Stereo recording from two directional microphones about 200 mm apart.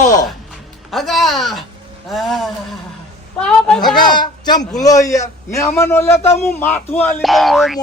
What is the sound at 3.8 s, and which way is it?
A man's voice, 20° left (ahead or behind).